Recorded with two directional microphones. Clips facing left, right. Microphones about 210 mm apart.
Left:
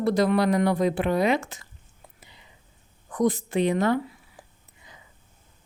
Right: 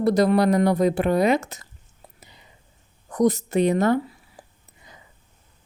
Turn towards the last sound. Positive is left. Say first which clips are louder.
# right 2 dB
turn(degrees=-35)  # may be behind; listen again after turning